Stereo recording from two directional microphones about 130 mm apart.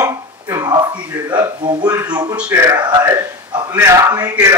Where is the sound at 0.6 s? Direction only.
30° right (ahead or behind).